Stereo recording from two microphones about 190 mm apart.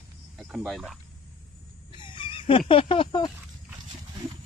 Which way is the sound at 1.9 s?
25° left (ahead or behind).